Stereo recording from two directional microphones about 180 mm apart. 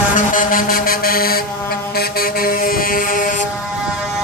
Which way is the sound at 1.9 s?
55° left (ahead or behind).